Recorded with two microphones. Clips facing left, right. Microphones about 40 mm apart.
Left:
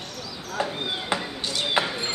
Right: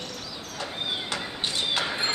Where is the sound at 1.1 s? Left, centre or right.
Left.